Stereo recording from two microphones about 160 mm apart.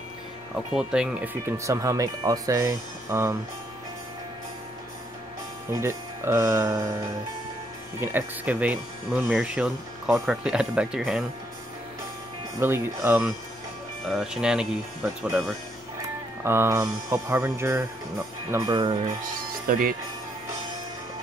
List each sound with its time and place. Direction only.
0.7 s speech: 5° right (ahead or behind)
5.7 s speech: 15° right (ahead or behind)
8.0 s speech: 10° right (ahead or behind)
12.5 s speech: 15° right (ahead or behind)
14.0 s speech: centre (ahead or behind)
16.4 s speech: 15° right (ahead or behind)
19.6 s speech: 60° right (ahead or behind)